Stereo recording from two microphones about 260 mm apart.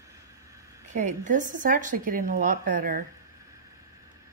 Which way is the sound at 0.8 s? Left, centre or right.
Right.